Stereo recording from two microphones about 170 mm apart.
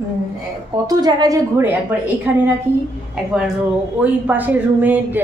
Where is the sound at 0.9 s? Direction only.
25° right (ahead or behind).